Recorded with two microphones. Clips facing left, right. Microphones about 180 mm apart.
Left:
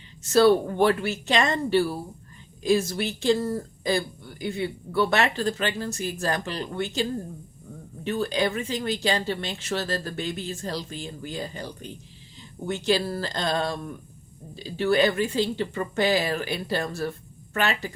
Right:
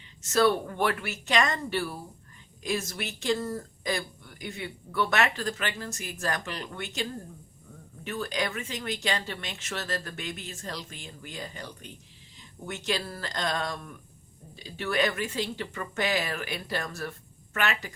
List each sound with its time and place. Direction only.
0.2 s speech: 30° left (ahead or behind)